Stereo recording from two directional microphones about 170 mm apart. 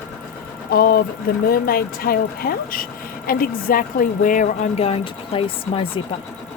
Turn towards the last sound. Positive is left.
turn(degrees=30)  # may be behind; listen again after turning